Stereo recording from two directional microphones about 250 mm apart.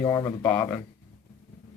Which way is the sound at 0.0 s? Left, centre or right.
Centre.